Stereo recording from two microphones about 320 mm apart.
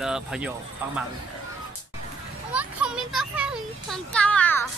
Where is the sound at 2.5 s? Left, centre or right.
Centre.